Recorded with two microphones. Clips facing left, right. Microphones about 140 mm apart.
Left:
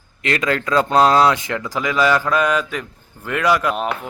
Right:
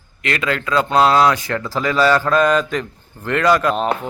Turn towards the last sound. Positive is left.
turn(degrees=10)  # may be behind; listen again after turning